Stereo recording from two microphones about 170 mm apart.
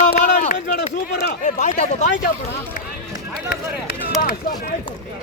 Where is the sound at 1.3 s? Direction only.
45° left (ahead or behind).